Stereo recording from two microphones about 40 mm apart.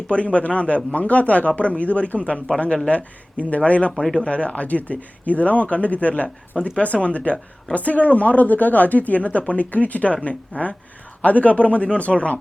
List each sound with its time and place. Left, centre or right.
0.1 s speech: left
3.9 s speech: centre
4.2 s speech: left
6.6 s speech: left